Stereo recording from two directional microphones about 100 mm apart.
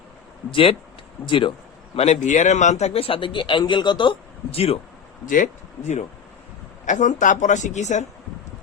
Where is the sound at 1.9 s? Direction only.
90° left; by 4.2 s 50° left (ahead or behind).